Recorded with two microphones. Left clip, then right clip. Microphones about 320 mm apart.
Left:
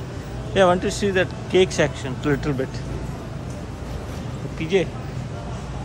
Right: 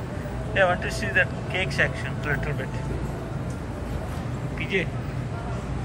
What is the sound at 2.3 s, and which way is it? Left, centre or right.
Speech, left.